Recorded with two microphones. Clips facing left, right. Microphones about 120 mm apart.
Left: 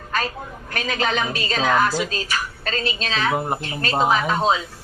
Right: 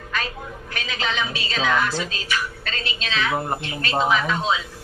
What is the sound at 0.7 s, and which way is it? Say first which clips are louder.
A woman's voice: left 5 dB; 45° left (ahead or behind).